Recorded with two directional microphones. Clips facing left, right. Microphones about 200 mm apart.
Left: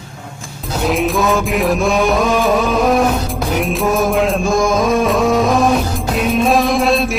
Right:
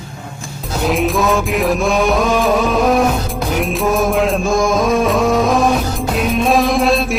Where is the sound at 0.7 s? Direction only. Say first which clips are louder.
Even; centre (ahead or behind).